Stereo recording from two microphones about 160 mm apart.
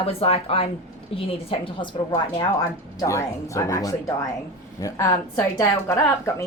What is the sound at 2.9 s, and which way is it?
Speech, 20° left (ahead or behind).